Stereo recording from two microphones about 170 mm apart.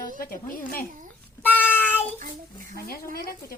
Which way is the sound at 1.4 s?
10° left (ahead or behind).